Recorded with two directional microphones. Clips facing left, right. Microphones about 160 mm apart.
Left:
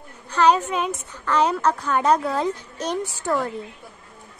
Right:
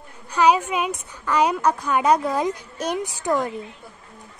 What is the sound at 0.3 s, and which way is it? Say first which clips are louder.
A woman's voice: even; 10° right (ahead or behind).